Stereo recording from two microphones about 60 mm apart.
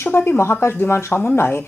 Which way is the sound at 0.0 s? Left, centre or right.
Left.